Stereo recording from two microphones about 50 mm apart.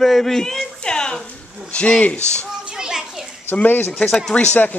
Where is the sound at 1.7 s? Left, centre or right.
Left.